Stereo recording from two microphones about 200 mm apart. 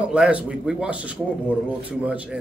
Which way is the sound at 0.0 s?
5° right (ahead or behind).